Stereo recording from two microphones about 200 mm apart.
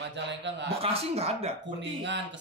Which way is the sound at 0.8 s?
30° right (ahead or behind).